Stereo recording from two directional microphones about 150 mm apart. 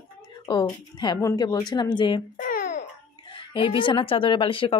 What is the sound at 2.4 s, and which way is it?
Babbling, 70° left (ahead or behind).